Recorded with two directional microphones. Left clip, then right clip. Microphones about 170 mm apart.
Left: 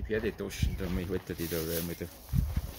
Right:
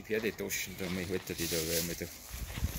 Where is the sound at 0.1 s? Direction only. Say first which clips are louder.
Left 1 dB; 65° left (ahead or behind).